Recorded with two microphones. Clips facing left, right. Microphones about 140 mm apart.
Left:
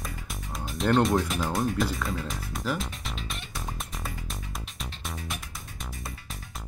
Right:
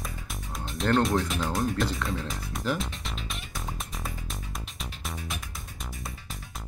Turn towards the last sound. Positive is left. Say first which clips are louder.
# even
turn(degrees=0)  # may be behind; listen again after turning